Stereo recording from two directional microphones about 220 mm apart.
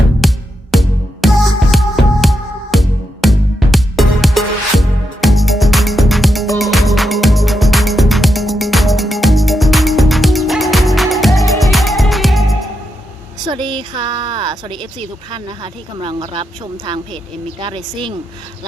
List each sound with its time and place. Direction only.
0.2 s music: centre (ahead or behind)
13.5 s a sound: 20° right (ahead or behind)
15.3 s a woman's voice: 20° right (ahead or behind)